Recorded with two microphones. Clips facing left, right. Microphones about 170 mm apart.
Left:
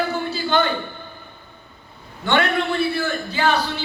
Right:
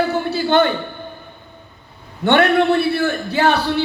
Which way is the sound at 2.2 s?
60° right (ahead or behind).